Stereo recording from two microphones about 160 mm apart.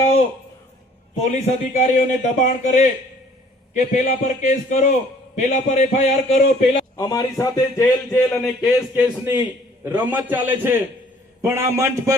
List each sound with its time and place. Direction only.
1.2 s a man's voice: 45° left (ahead or behind)
6.9 s a man's voice: 25° left (ahead or behind); by 9.0 s centre (ahead or behind)
9.2 s a man's voice: 10° right (ahead or behind)